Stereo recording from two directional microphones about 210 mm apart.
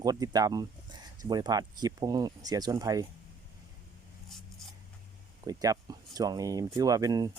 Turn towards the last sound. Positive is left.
turn(degrees=-20)  # may be behind; listen again after turning